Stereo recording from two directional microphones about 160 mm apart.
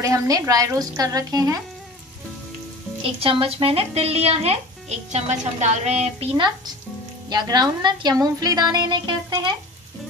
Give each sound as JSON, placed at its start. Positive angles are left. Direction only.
{"t": 0.0, "sound": "a woman's voice", "side_deg": -20}
{"t": 3.0, "sound": "a woman's voice", "side_deg": -35}